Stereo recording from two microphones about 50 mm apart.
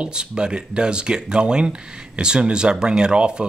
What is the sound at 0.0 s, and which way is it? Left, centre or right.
Speech, centre.